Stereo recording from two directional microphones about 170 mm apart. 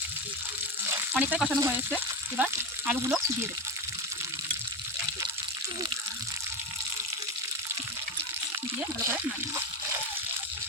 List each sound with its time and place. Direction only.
1.1 s speech: 5° right (ahead or behind)
9.0 s speech: 15° right (ahead or behind)